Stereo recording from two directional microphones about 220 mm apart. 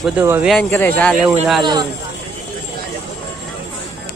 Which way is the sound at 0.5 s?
10° left (ahead or behind).